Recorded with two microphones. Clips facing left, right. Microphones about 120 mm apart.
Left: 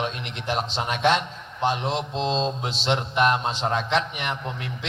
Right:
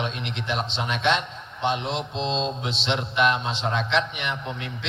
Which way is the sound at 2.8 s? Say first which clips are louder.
Left 1 dB; 40° left (ahead or behind).